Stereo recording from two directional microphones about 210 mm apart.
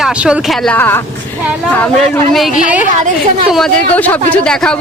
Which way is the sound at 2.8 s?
35° right (ahead or behind).